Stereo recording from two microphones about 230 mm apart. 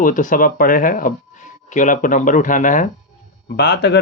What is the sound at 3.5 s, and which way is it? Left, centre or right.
Speech, left.